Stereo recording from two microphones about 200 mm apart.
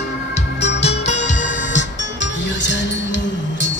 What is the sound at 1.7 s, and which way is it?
Music, 65° left (ahead or behind).